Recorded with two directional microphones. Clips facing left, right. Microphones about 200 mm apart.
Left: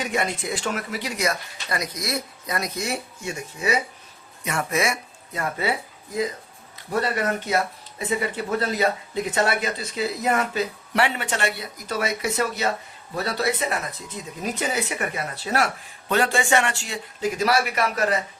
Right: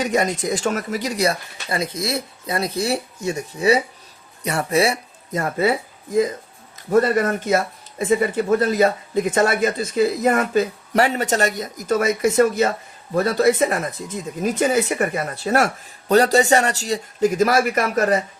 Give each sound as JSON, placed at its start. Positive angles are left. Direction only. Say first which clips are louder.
{"t": 0.0, "sound": "speech", "louder": "right 6 dB", "side_deg": -40}
{"t": 6.9, "sound": "speech", "louder": "right 7 dB", "side_deg": -45}